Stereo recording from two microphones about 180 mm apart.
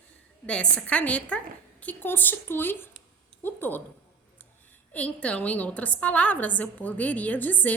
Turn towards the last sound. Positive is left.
turn(degrees=10)  # may be behind; listen again after turning